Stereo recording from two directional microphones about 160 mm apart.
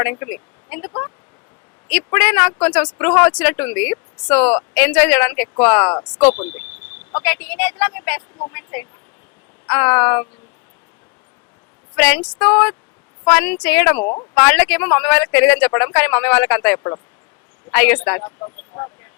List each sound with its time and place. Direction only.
0.0 s speech: 15° left (ahead or behind)
11.9 s speech: 5° left (ahead or behind)
18.2 s speech: 25° left (ahead or behind)